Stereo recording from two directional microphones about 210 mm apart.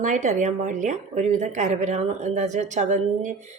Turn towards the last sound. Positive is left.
turn(degrees=-35)  # may be behind; listen again after turning